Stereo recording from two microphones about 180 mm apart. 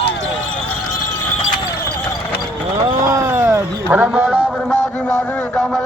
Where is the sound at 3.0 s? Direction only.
15° right (ahead or behind).